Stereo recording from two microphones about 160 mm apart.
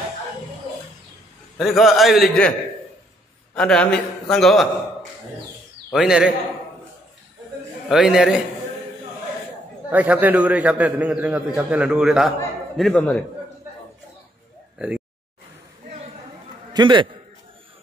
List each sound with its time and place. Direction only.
1.6 s a man's voice: centre (ahead or behind)
3.5 s a man's voice: 5° left (ahead or behind)
5.9 s a man's voice: 5° right (ahead or behind)
7.9 s a man's voice: centre (ahead or behind)
9.8 s a man's voice: 10° right (ahead or behind)
14.8 s a sound: 5° right (ahead or behind)
16.7 s a man's voice: 30° right (ahead or behind)